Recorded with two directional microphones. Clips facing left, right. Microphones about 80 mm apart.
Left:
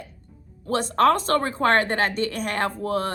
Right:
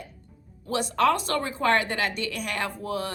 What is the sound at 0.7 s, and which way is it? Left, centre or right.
A woman's voice, left.